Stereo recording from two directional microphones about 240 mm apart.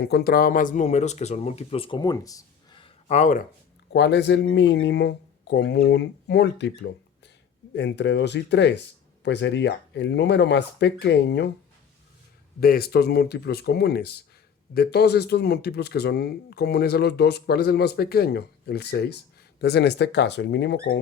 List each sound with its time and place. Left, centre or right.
0.0 s speech: left
3.9 s speech: left
12.5 s speech: left